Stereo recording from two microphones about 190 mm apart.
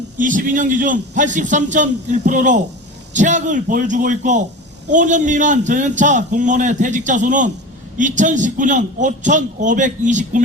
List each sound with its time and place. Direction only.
0.2 s a man's voice: 45° right (ahead or behind)